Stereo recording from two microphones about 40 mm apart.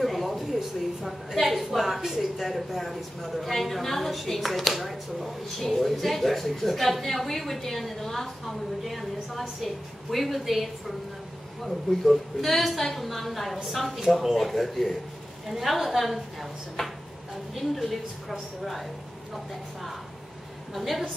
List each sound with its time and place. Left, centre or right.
0.0 s a sound: centre
1.3 s speech: centre
17.6 s speech: centre
20.7 s speech: centre